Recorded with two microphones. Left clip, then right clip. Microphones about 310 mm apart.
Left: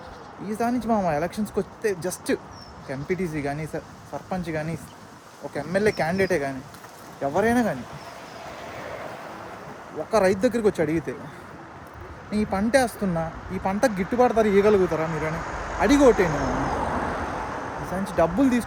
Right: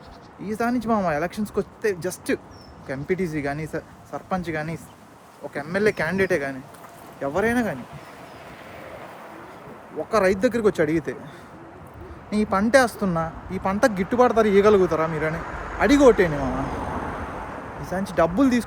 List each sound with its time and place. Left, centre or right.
0.4 s speech: centre
10.1 s speech: centre
12.3 s speech: centre
16.6 s vehicle: left
18.2 s speech: centre